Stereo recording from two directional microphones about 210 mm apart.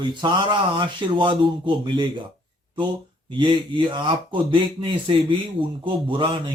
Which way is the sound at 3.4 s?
25° right (ahead or behind).